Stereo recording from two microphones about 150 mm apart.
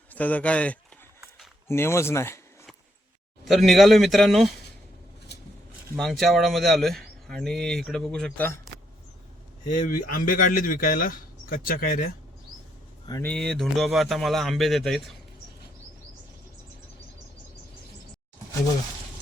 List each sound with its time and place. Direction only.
0.1 s speech: 10° left (ahead or behind)
3.4 s speech: centre (ahead or behind)
6.0 s speech: centre (ahead or behind)
9.6 s speech: 65° left (ahead or behind)
13.2 s speech: 5° left (ahead or behind)